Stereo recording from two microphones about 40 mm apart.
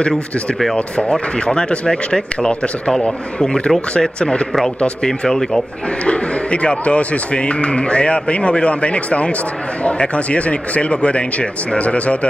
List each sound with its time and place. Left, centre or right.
0.1 s speech: centre
0.7 s speech: left
6.0 s speech: left